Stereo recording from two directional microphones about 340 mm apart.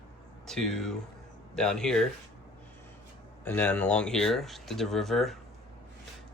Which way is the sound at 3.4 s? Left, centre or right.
Centre.